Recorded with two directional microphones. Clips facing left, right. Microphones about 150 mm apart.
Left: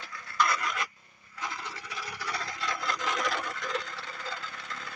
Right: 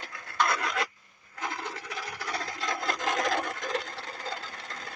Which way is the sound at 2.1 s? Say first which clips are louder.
Even; 45° right (ahead or behind).